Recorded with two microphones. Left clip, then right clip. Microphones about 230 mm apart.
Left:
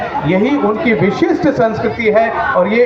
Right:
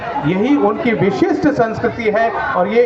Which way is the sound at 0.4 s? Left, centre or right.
Right.